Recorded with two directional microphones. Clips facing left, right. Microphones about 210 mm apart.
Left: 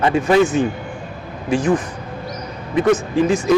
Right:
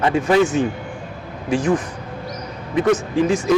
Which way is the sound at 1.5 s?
15° left (ahead or behind).